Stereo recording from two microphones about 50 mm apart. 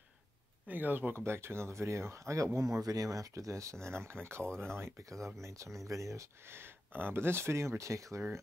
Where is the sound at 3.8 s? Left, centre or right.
Right.